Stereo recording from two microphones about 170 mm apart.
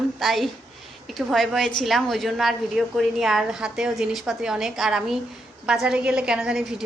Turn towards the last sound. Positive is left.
turn(degrees=-5)  # may be behind; listen again after turning